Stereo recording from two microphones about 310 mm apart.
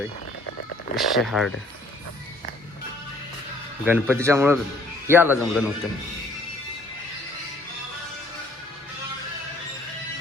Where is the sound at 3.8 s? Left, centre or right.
Centre.